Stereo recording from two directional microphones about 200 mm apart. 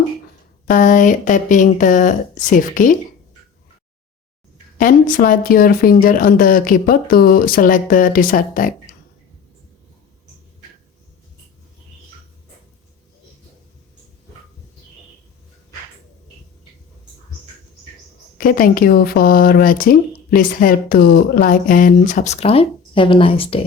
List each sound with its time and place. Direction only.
0.7 s speech: 40° left (ahead or behind)
4.8 s speech: 45° left (ahead or behind)
18.3 s speech: 45° left (ahead or behind); by 23.6 s 25° left (ahead or behind)